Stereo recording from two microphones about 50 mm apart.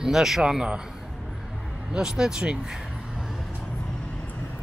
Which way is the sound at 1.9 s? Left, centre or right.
Centre.